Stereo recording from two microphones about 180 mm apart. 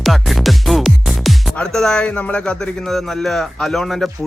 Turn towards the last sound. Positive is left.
turn(degrees=0)  # may be behind; listen again after turning